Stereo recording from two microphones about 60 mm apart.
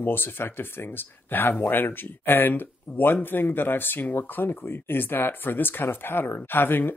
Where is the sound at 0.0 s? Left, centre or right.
Left.